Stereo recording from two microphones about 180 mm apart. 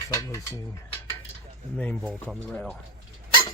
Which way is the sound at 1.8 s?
10° left (ahead or behind).